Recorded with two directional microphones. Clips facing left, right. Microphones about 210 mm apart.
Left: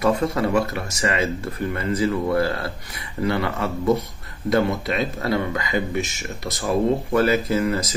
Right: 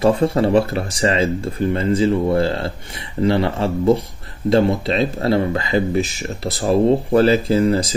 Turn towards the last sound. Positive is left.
turn(degrees=-30)  # may be behind; listen again after turning